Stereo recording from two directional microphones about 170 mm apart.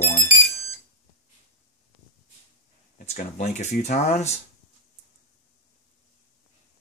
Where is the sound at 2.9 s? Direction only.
45° left (ahead or behind).